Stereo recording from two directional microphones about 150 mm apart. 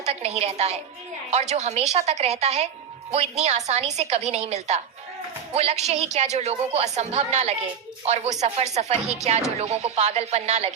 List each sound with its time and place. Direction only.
0.0 s speech: 45° right (ahead or behind)